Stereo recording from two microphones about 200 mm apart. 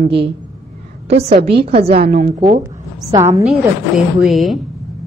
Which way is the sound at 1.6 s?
30° right (ahead or behind).